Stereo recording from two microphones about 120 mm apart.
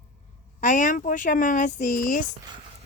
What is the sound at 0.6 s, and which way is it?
Speech, 90° left.